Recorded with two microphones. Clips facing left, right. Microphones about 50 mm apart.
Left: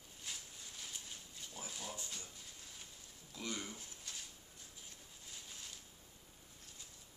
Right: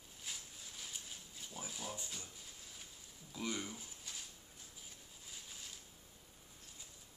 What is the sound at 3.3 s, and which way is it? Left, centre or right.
Speech, centre.